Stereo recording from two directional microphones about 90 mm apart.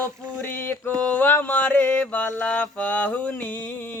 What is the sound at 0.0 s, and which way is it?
Mantra, 20° left (ahead or behind).